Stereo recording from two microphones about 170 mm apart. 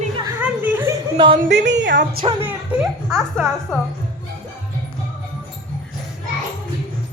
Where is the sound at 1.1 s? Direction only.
30° right (ahead or behind).